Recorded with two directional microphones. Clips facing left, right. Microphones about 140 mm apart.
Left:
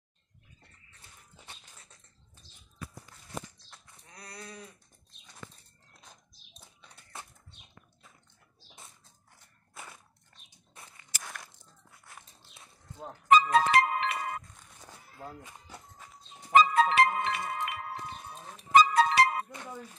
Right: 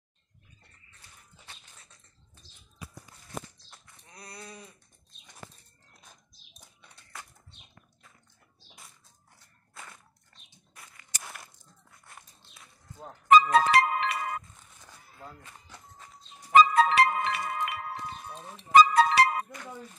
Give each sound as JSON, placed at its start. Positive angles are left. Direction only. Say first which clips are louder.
{"t": 3.7, "sound": "sheep", "louder": "right 1 dB", "side_deg": -5}
{"t": 7.1, "sound": "bird flight", "louder": "even", "side_deg": 25}
{"t": 10.7, "sound": "a sound", "louder": "left 1 dB", "side_deg": 25}
{"t": 11.1, "sound": "walk", "louder": "even", "side_deg": 5}
{"t": 12.0, "sound": "biting", "louder": "even", "side_deg": 0}
{"t": 13.3, "sound": "music", "louder": "right 2 dB", "side_deg": -90}
{"t": 14.8, "sound": "a sound", "louder": "left 3 dB", "side_deg": 15}
{"t": 16.5, "sound": "music", "louder": "right 2 dB", "side_deg": -85}
{"t": 18.7, "sound": "music", "louder": "right 3 dB", "side_deg": -75}